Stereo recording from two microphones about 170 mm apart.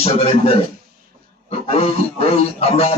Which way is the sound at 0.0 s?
35° left (ahead or behind).